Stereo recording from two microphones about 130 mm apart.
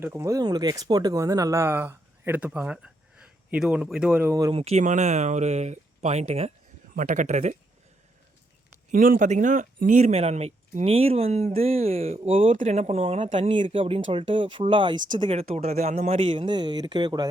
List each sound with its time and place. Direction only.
0.0 s speech: 20° right (ahead or behind)
4.3 s speech: 25° right (ahead or behind)
4.5 s speech: 50° right (ahead or behind)
4.8 s speech: 65° right (ahead or behind)
6.9 s speech: 85° right; by 7.5 s 70° right (ahead or behind)
8.9 s speech: 90° right; by 13.5 s 65° right (ahead or behind)
13.5 s speech: 40° right (ahead or behind)
15.4 s speech: 55° right (ahead or behind); by 17.2 s 35° right (ahead or behind)